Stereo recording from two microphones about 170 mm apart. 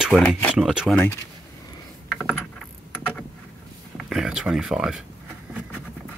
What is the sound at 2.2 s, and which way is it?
Rowboat, 5° left (ahead or behind).